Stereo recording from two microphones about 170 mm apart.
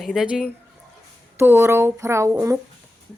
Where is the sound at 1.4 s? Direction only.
15° right (ahead or behind).